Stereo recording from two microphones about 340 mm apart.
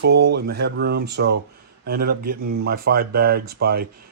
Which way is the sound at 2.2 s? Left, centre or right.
Right.